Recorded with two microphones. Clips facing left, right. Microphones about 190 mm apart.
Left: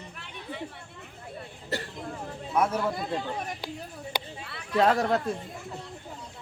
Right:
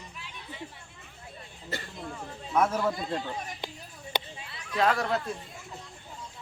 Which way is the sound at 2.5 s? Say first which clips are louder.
Even; 10° left (ahead or behind).